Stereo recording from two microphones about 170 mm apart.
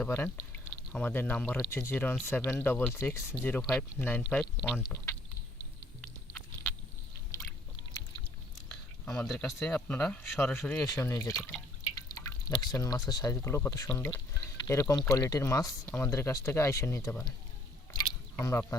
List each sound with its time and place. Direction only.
0.0 s speech: 10° left (ahead or behind)
6.0 s chewing: 5° left (ahead or behind)
9.2 s speech: centre (ahead or behind); by 17.3 s 20° left (ahead or behind)
17.9 s squish: 20° left (ahead or behind)